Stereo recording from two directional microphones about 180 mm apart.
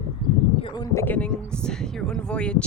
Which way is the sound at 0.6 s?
25° left (ahead or behind).